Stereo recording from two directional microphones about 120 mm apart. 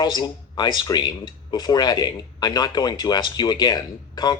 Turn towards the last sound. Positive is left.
turn(degrees=35)  # may be behind; listen again after turning